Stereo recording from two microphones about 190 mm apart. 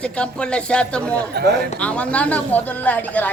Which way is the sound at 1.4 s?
60° right (ahead or behind).